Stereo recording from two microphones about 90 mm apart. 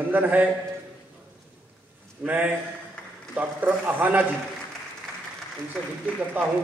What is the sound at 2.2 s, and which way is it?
A man's voice, 20° right (ahead or behind).